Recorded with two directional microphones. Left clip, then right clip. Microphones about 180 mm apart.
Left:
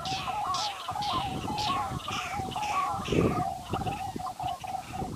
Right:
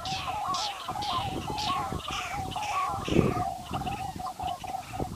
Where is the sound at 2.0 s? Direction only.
Centre (ahead or behind).